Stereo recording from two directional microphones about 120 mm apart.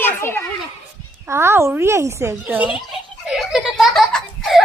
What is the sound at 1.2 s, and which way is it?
Speech, 20° right (ahead or behind).